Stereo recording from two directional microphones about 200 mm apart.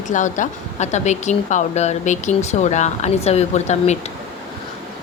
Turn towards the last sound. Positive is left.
turn(degrees=35)  # may be behind; listen again after turning